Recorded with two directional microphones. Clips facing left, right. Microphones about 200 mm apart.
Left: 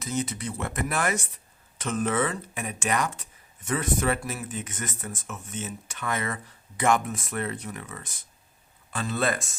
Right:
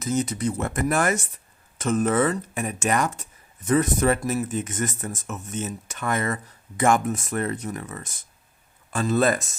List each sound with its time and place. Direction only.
0.0 s speech: 40° right (ahead or behind)